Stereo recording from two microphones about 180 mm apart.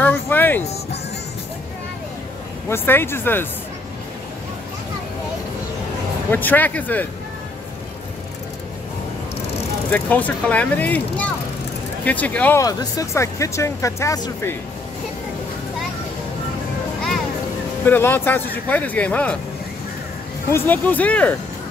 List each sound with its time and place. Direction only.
0.0 s music: 10° left (ahead or behind)
2.7 s speech: 10° left (ahead or behind)
6.3 s speech: 10° left (ahead or behind)
9.8 s speech: 10° left (ahead or behind)
12.6 s speech: 20° left (ahead or behind)
17.8 s speech: 10° left (ahead or behind)
20.5 s speech: 10° left (ahead or behind)